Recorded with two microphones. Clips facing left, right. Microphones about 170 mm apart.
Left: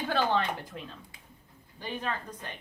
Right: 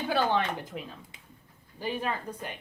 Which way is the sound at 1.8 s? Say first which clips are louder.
Right 3 dB; 10° right (ahead or behind).